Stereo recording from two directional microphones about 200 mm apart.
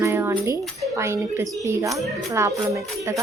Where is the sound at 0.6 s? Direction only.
Centre (ahead or behind).